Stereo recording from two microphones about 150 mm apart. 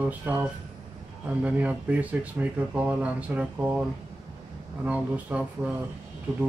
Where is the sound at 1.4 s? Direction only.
10° right (ahead or behind).